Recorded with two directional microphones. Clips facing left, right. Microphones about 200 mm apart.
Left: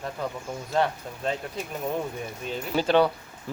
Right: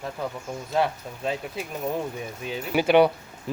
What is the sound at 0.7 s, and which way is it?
Speech, 5° right (ahead or behind).